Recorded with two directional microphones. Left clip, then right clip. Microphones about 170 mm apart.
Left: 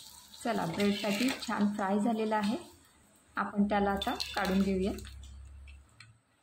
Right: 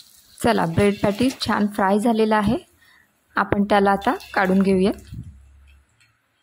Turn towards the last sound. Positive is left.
turn(degrees=-70)  # may be behind; listen again after turning